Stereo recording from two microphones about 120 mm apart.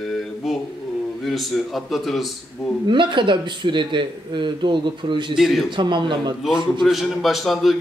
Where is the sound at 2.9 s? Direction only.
40° right (ahead or behind).